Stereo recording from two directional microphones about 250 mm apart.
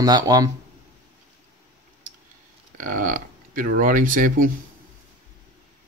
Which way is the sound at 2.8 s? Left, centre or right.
Right.